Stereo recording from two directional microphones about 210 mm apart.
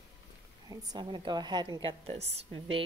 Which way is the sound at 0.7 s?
20° right (ahead or behind).